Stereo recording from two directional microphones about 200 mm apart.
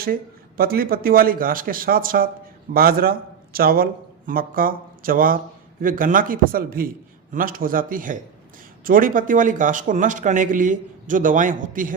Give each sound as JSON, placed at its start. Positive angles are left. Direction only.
{"t": 0.0, "sound": "a man's voice", "side_deg": -45}